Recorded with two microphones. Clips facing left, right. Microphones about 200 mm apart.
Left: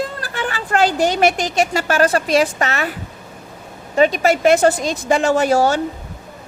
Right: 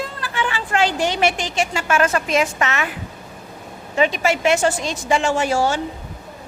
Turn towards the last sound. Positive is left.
turn(degrees=40)  # may be behind; listen again after turning